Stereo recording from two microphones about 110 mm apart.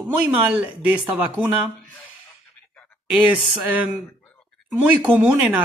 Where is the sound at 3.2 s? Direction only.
15° right (ahead or behind).